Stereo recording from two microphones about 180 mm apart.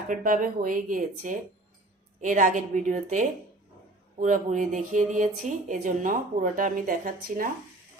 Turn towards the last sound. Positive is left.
turn(degrees=-50)  # may be behind; listen again after turning